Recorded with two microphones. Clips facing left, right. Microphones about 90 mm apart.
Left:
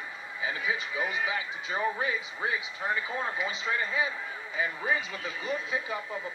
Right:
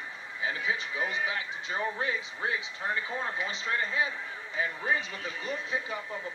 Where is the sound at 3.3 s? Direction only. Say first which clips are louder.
Left 1 dB; 15° left (ahead or behind).